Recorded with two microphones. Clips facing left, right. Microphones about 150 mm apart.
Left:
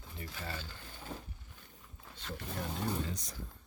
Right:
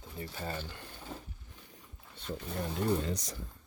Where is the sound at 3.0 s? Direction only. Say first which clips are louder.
Right 6 dB; 80° right.